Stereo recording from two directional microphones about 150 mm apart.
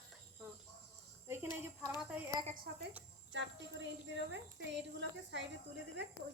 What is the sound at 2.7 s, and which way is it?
Speech, 90° right.